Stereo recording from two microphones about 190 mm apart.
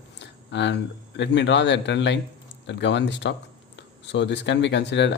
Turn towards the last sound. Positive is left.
turn(degrees=65)  # may be behind; listen again after turning